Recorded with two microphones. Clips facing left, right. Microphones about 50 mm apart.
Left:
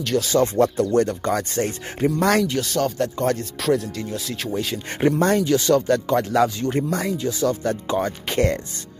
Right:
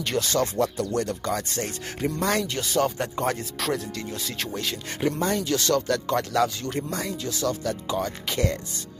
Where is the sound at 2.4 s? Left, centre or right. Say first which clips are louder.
Left 3 dB; centre.